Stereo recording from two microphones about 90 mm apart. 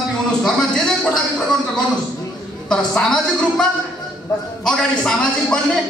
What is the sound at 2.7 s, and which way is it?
A man's voice, 5° left (ahead or behind).